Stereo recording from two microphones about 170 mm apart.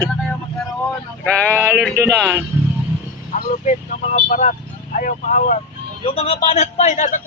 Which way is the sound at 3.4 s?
50° left (ahead or behind).